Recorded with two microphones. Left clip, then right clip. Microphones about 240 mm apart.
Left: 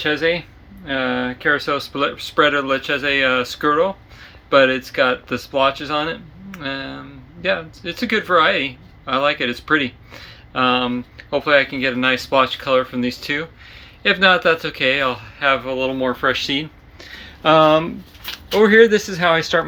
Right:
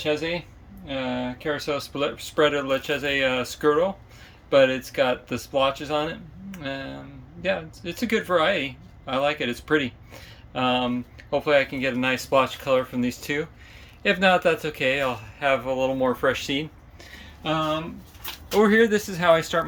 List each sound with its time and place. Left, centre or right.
0.0 s speech: centre
17.5 s speech: left
18.5 s speech: centre